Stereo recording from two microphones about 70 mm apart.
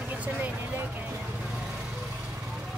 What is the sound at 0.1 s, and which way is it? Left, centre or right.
Vehicle, right.